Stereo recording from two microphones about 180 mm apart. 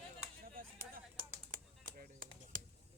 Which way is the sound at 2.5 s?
45° right (ahead or behind).